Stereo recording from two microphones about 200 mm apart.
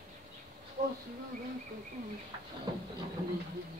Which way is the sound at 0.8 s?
40° right (ahead or behind).